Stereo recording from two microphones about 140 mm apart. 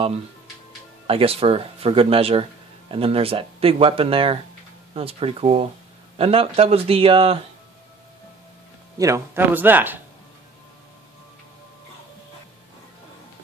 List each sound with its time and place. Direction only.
1.0 s speech: 40° right (ahead or behind)
8.9 s speech: 20° right (ahead or behind)